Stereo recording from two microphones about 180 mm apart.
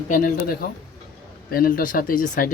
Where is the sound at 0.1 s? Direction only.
55° left (ahead or behind).